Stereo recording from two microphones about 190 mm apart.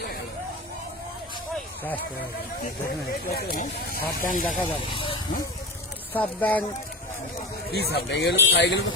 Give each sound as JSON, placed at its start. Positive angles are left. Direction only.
{"t": 1.5, "sound": "a sound", "side_deg": 10}
{"t": 2.6, "sound": "speech", "side_deg": 50}
{"t": 4.9, "sound": "speech", "side_deg": 25}
{"t": 6.1, "sound": "speech", "side_deg": 10}
{"t": 7.7, "sound": "a man's voice", "side_deg": 60}